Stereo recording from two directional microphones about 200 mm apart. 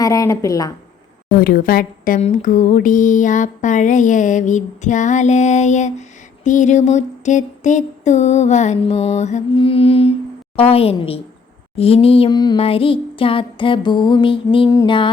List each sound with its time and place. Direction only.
0.0 s a woman's voice: 15° left (ahead or behind)
1.4 s speech: 45° left (ahead or behind); by 10.2 s 30° left (ahead or behind)
10.6 s a sound: 30° left (ahead or behind)